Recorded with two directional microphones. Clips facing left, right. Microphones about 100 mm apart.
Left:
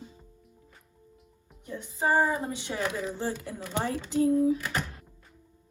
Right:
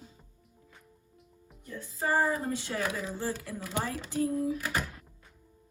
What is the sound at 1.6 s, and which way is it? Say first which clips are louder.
Speech: left 4 dB; 20° left (ahead or behind).